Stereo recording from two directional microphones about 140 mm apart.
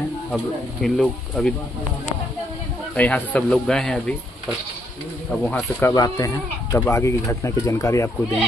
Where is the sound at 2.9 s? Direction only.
10° left (ahead or behind).